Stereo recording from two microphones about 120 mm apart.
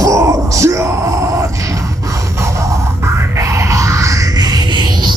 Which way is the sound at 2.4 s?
25° right (ahead or behind).